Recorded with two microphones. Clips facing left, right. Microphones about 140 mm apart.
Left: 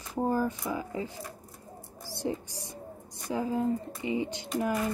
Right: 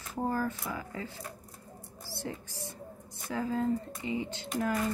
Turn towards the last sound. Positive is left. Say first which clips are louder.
# left 1 dB
turn(degrees=15)  # may be behind; listen again after turning